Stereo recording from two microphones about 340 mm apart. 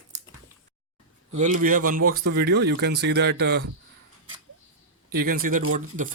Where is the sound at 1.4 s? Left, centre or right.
Right.